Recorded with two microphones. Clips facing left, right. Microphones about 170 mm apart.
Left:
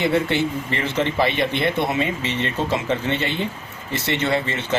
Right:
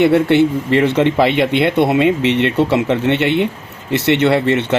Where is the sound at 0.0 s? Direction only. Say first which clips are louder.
Right 9 dB; 65° right (ahead or behind).